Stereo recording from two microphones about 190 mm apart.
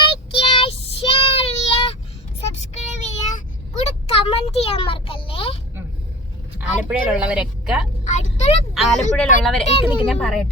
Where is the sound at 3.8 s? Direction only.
30° left (ahead or behind).